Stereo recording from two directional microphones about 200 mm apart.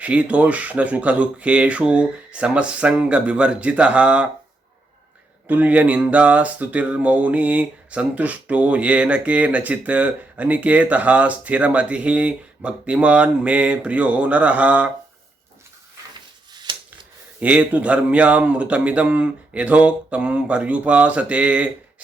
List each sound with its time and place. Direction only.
0.0 s speech: 5° right (ahead or behind)
5.5 s speech: 10° right (ahead or behind)
16.7 s a sound: 25° right (ahead or behind)
17.4 s speech: 5° right (ahead or behind)